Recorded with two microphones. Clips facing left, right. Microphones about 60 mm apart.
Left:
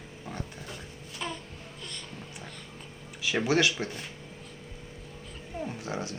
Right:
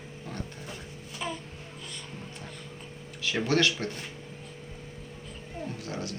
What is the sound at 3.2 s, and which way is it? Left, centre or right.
Speech, centre.